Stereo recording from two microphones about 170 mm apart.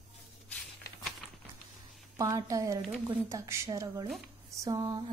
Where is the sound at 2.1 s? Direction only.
20° right (ahead or behind).